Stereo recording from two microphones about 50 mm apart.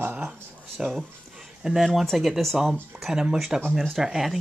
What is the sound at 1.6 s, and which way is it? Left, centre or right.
Speech, centre.